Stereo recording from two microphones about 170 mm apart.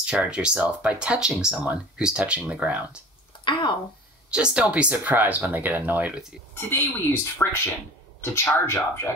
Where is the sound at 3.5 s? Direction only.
30° left (ahead or behind).